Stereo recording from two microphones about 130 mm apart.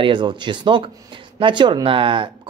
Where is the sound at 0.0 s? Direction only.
40° right (ahead or behind).